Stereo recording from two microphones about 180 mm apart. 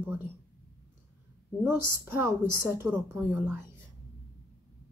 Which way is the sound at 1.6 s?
15° right (ahead or behind).